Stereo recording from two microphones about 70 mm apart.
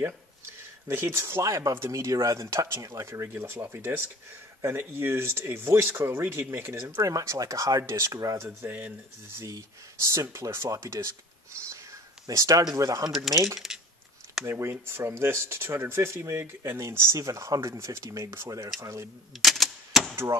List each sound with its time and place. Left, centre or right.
0.8 s speech: right
7.0 s speech: right
8.5 s speech: right
9.5 s speech: right
13.3 s speech: centre
13.6 s a sound: centre
14.4 s speech: right
17.6 s speech: right
19.4 s typewriter: centre